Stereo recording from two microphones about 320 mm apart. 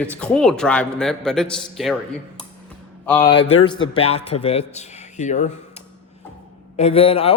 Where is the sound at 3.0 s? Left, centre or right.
Centre.